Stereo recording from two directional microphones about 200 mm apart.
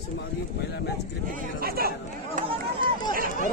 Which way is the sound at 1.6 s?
50° right (ahead or behind).